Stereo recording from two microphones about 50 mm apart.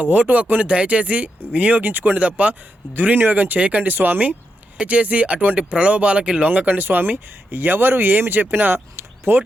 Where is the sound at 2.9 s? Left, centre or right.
Right.